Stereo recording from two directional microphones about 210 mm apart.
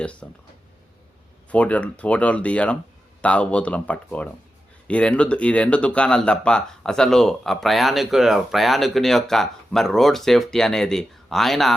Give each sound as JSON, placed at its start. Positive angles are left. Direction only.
{"t": 0.0, "sound": "speech", "side_deg": 5}
{"t": 1.5, "sound": "speech", "side_deg": 5}